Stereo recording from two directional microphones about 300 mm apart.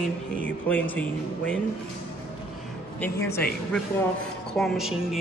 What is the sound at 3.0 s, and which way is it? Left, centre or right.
Speech, centre.